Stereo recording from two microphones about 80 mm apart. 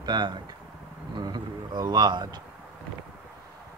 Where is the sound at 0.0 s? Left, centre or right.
Right.